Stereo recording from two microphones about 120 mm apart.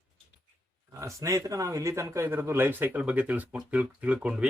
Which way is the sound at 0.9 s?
25° right (ahead or behind).